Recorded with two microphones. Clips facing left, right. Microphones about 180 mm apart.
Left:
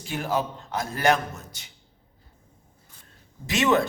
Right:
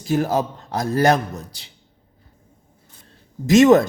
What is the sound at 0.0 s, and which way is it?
A man's voice, 40° right (ahead or behind).